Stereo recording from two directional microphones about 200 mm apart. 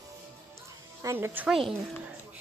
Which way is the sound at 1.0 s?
15° right (ahead or behind).